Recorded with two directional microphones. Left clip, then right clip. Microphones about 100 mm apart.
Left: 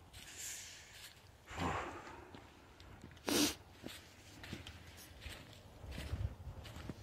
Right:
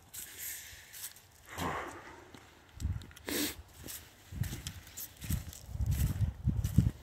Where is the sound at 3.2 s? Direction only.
55° left (ahead or behind).